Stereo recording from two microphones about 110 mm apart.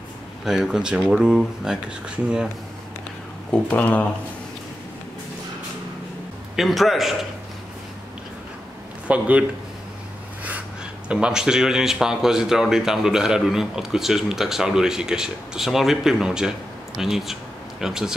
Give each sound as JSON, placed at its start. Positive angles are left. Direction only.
{"t": 0.5, "sound": "speech", "side_deg": -5}
{"t": 3.5, "sound": "speech", "side_deg": 15}
{"t": 6.5, "sound": "speech", "side_deg": 0}
{"t": 9.0, "sound": "speech", "side_deg": -10}
{"t": 11.1, "sound": "speech", "side_deg": -10}